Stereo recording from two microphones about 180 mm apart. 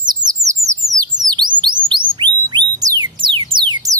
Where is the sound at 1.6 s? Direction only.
25° right (ahead or behind).